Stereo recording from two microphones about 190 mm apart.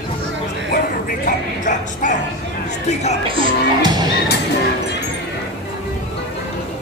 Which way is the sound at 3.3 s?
20° right (ahead or behind).